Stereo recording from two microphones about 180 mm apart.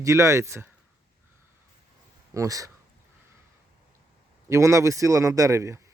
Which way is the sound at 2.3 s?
20° right (ahead or behind).